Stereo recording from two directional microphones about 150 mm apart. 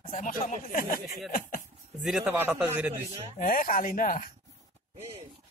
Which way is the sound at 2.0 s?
5° right (ahead or behind).